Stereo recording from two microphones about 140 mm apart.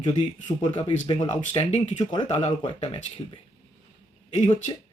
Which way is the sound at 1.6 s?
50° left (ahead or behind).